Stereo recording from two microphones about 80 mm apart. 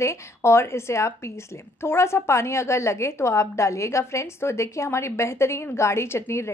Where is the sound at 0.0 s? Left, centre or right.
Left.